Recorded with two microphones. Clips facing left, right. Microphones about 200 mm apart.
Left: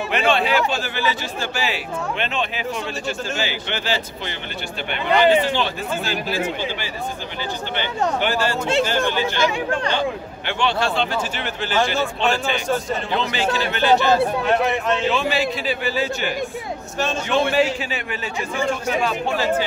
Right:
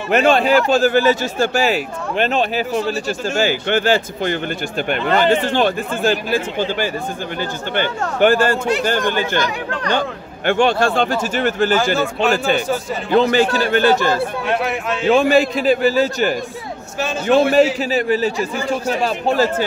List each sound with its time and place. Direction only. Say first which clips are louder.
0.1 s a man's voice: right 7 dB; 45° right (ahead or behind)
8.2 s a man's voice: right 7 dB; 50° right (ahead or behind)
14.4 s speech: left 1 dB; centre (ahead or behind)
15.0 s a man's voice: right 8 dB; 45° right (ahead or behind)